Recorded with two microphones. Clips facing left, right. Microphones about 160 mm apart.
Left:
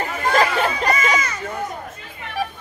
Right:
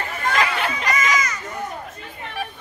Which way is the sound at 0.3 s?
35° left (ahead or behind).